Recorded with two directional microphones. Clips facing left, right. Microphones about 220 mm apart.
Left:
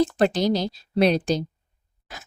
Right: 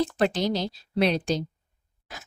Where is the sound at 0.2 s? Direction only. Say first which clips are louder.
Left 4 dB; 40° left (ahead or behind).